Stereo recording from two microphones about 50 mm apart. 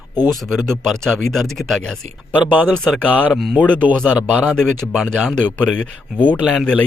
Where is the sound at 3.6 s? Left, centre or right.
Left.